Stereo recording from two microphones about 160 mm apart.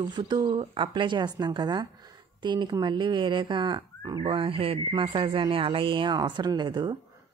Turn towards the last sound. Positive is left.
turn(degrees=-25)  # may be behind; listen again after turning